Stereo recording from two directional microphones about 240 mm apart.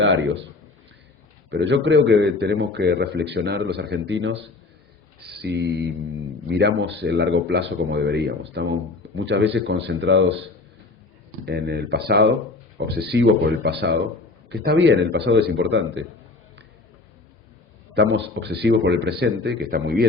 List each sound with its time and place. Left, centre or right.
0.0 s a man's voice: right
1.5 s a man's voice: right
11.4 s a man's voice: right
17.9 s a man's voice: right